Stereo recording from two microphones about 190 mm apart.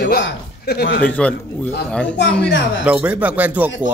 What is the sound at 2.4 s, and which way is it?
Speech, 75° left (ahead or behind).